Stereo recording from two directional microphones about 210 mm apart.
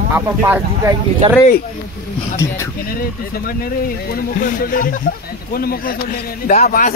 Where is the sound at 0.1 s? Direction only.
10° right (ahead or behind).